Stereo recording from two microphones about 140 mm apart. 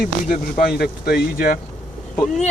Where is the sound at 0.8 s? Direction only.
90° left.